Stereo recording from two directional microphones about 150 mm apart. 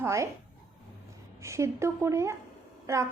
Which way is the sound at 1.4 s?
20° right (ahead or behind).